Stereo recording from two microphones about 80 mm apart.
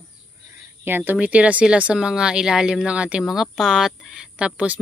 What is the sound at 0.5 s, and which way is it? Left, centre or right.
Speech, right.